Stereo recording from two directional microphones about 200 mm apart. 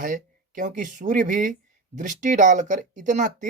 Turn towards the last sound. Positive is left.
turn(degrees=-40)  # may be behind; listen again after turning